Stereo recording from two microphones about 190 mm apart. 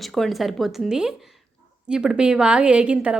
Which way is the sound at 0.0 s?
Centre (ahead or behind).